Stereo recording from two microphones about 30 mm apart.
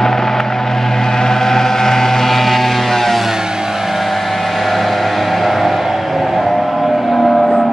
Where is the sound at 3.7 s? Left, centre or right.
Centre.